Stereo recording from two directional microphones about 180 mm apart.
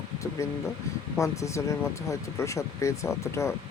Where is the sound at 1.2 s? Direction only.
15° left (ahead or behind).